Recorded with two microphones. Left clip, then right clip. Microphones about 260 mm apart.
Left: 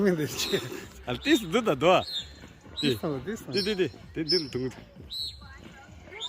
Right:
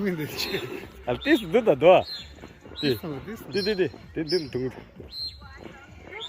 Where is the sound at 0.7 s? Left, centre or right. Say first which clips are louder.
Right 5 dB; centre.